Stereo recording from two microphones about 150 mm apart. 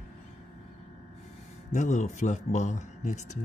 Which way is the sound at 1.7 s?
50° left (ahead or behind).